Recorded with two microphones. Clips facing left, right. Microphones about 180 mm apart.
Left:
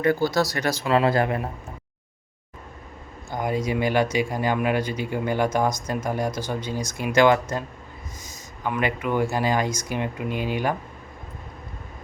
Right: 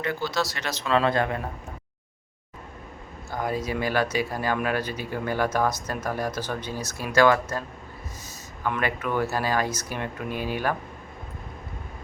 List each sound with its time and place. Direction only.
0.0 s speech: 40° left (ahead or behind)
0.3 s speech: 15° left (ahead or behind)
0.9 s speech: 25° left (ahead or behind)
3.2 s speech: 15° left (ahead or behind)
8.6 s speech: 15° left (ahead or behind)